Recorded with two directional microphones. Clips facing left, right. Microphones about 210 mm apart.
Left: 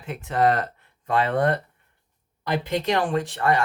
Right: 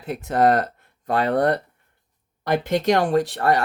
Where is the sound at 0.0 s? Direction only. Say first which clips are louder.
Right 3 dB; 40° right (ahead or behind).